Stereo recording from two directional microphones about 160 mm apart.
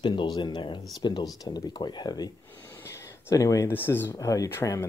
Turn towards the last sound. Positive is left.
turn(degrees=15)  # may be behind; listen again after turning